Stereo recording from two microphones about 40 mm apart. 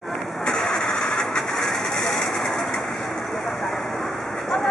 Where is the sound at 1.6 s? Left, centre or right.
Centre.